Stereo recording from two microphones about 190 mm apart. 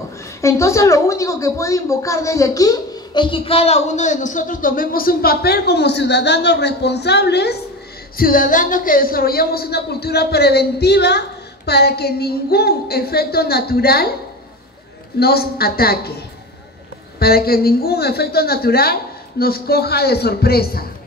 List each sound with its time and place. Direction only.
0.4 s a woman's voice: 15° left (ahead or behind); by 7.5 s 60° left (ahead or behind)
8.2 s a woman's voice: 45° left (ahead or behind)
15.1 s a woman's voice: 55° left (ahead or behind)
17.2 s a woman's voice: 55° left (ahead or behind)